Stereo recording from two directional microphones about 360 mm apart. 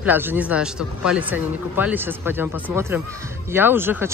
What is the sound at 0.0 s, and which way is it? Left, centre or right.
Speech, centre.